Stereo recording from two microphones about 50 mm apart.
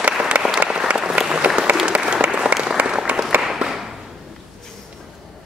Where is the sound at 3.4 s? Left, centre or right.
Centre.